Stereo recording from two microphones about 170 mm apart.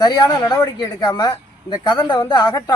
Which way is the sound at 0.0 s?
25° left (ahead or behind).